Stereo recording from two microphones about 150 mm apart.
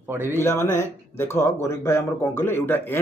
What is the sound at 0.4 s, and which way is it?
Speech, 15° left (ahead or behind).